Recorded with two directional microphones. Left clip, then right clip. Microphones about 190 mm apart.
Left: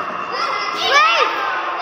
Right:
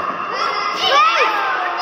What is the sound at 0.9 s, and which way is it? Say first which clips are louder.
Children playing: left 1 dB; 30° left (ahead or behind).